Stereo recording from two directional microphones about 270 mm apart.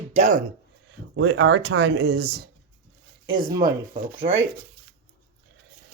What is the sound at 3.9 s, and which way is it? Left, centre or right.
Music, centre.